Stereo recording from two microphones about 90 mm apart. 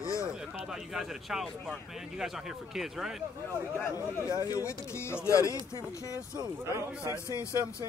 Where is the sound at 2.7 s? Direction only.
5° right (ahead or behind).